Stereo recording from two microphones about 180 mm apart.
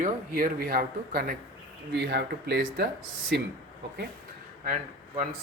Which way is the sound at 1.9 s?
65° right (ahead or behind).